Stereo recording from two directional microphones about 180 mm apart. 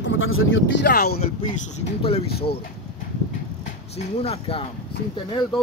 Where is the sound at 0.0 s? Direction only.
90° left; by 1.2 s 60° left (ahead or behind).